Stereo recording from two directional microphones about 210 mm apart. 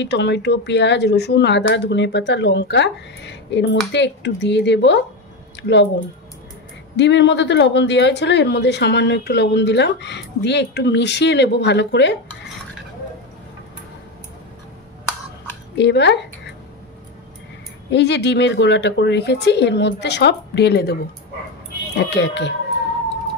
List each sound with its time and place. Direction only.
0.0 s speech: 55° left (ahead or behind)
7.0 s speech: 55° left (ahead or behind)
15.8 s speech: 55° left (ahead or behind)
17.9 s speech: 55° left (ahead or behind)